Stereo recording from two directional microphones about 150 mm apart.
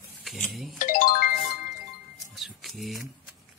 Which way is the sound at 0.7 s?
65° left (ahead or behind).